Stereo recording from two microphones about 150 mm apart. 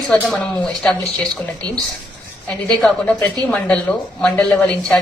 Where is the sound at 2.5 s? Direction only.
5° left (ahead or behind).